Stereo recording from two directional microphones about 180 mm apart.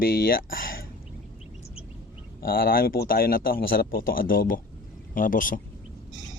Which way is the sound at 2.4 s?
55° left (ahead or behind).